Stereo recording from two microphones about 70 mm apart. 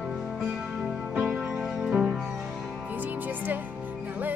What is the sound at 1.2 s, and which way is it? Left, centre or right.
Music, centre.